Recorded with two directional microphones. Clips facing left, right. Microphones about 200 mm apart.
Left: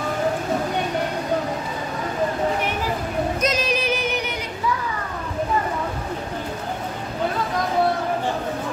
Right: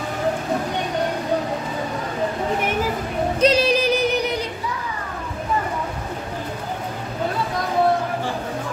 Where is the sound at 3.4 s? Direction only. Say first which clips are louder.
Right 10 dB; 35° right (ahead or behind).